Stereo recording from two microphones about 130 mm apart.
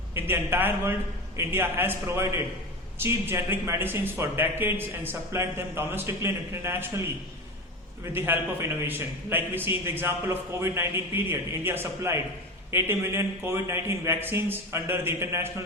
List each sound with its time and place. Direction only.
0.1 s a man's voice: 15° right (ahead or behind)
8.1 s a man's voice: 15° right (ahead or behind)